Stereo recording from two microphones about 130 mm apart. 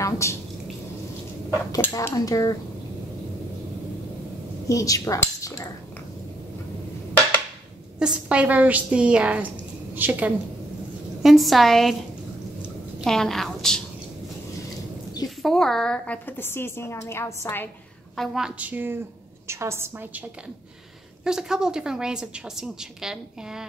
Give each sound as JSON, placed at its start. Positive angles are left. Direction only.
{"t": 0.0, "sound": "a woman's voice", "side_deg": 20}
{"t": 1.8, "sound": "speech", "side_deg": 25}
{"t": 4.6, "sound": "speech", "side_deg": 25}
{"t": 8.0, "sound": "a woman's voice", "side_deg": -10}
{"t": 11.2, "sound": "a woman's voice", "side_deg": 0}
{"t": 13.0, "sound": "a woman's voice", "side_deg": 5}
{"t": 15.2, "sound": "a woman's voice", "side_deg": 5}
{"t": 18.1, "sound": "a woman's voice", "side_deg": 0}
{"t": 21.2, "sound": "a woman's voice", "side_deg": -5}